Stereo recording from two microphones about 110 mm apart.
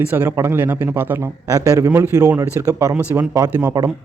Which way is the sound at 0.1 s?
25° right (ahead or behind).